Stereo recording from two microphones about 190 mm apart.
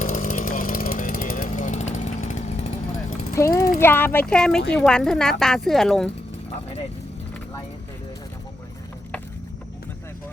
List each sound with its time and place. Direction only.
0.0 s chainsaw: 45° left (ahead or behind)
3.3 s speech: 15° left (ahead or behind); by 6.1 s centre (ahead or behind)